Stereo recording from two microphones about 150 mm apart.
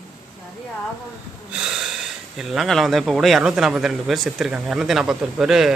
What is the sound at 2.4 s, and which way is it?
Speech, centre (ahead or behind).